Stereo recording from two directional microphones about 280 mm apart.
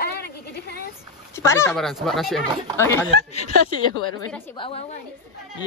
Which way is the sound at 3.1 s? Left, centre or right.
Left.